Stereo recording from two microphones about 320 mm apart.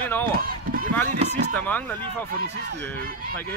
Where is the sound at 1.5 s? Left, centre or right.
Centre.